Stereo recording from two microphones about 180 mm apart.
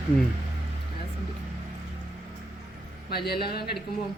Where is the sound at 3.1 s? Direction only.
60° left (ahead or behind).